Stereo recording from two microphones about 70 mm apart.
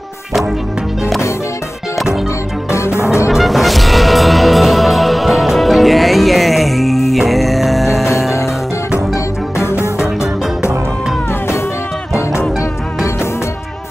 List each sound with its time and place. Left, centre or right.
2.7 s music: left
3.3 s music: centre
9.1 s music: left